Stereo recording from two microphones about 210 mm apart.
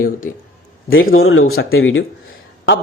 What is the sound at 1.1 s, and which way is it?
Speech, 75° left (ahead or behind).